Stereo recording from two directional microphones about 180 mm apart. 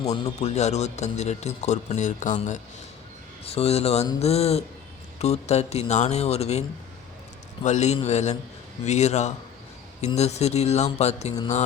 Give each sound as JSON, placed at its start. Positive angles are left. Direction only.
{"t": 0.1, "sound": "speech", "side_deg": 35}